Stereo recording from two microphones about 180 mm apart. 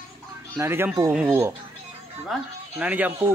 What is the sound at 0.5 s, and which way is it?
Speech, 15° right (ahead or behind).